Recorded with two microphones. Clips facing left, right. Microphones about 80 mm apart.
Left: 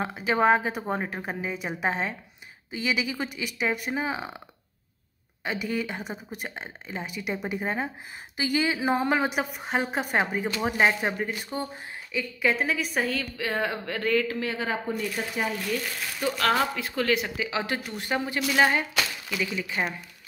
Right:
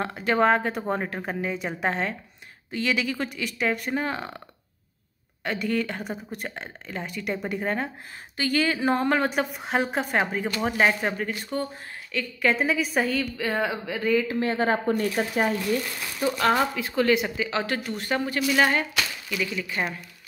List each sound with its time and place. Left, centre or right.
0.0 s a woman's voice: centre
5.4 s a woman's voice: centre
14.4 s a woman's voice: right
14.9 s speech: right
16.2 s speech: centre
16.7 s a woman's voice: centre
17.4 s a woman's voice: centre